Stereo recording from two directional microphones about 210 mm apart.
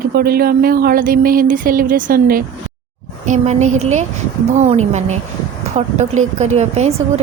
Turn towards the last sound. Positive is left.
turn(degrees=-30)  # may be behind; listen again after turning